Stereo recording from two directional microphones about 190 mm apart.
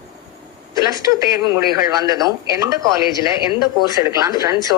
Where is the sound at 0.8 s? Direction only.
20° right (ahead or behind).